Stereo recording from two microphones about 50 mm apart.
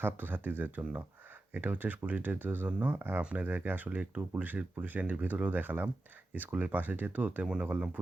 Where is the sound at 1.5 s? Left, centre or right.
Right.